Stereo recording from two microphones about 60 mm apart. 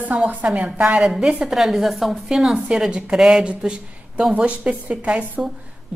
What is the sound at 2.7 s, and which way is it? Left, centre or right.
A woman's voice, centre.